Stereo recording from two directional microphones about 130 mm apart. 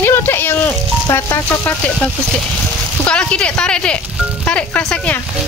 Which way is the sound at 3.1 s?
10° left (ahead or behind).